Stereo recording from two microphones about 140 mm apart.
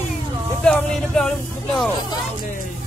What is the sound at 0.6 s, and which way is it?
Speech, 5° left (ahead or behind).